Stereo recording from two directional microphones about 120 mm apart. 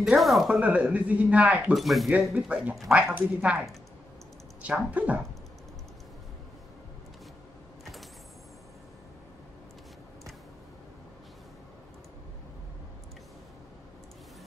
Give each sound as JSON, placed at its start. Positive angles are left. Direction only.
{"t": 0.0, "sound": "speech", "side_deg": 0}
{"t": 1.7, "sound": "speech", "side_deg": 0}
{"t": 3.0, "sound": "speech", "side_deg": -15}
{"t": 4.6, "sound": "speech", "side_deg": -10}